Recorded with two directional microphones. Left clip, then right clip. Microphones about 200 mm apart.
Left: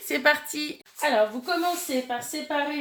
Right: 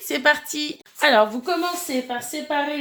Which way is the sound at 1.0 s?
50° right (ahead or behind).